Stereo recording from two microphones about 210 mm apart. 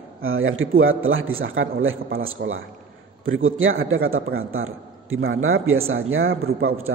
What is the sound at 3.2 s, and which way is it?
A man's voice, 70° right (ahead or behind).